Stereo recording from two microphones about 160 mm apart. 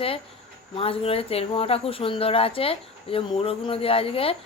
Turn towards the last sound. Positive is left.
turn(degrees=35)  # may be behind; listen again after turning